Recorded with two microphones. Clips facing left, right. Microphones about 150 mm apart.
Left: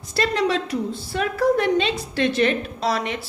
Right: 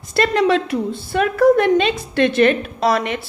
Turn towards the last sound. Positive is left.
turn(degrees=-60)  # may be behind; listen again after turning